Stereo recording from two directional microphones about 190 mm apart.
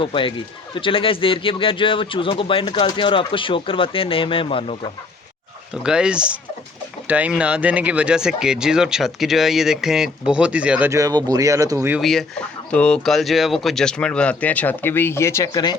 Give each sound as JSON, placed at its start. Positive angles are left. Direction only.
{"t": 0.0, "sound": "speech", "side_deg": 25}
{"t": 5.7, "sound": "speech", "side_deg": -5}
{"t": 11.9, "sound": "speech", "side_deg": 0}